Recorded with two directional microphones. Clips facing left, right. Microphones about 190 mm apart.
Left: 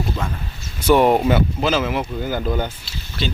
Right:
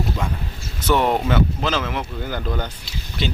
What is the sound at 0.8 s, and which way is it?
Speech, 10° left (ahead or behind).